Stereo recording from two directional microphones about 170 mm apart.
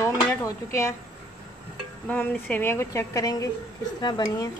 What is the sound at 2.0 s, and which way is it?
A woman's voice, 10° left (ahead or behind).